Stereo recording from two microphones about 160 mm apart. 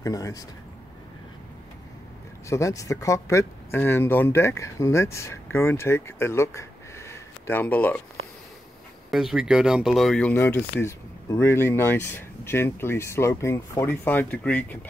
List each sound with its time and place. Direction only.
0.0 s speech: 20° left (ahead or behind)
2.5 s speech: 20° left (ahead or behind)
9.1 s speech: 5° right (ahead or behind)